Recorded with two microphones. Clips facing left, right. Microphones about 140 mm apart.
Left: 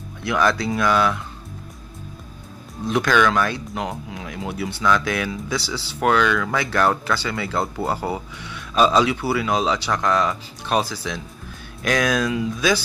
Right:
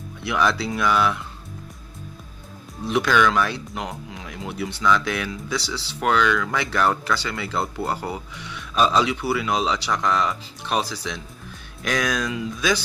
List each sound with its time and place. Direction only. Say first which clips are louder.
0.2 s speech: left 2 dB; centre (ahead or behind)
2.8 s speech: left 1 dB; 5° right (ahead or behind)